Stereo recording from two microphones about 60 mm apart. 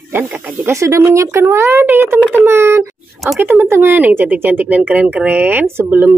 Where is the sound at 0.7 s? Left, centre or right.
Right.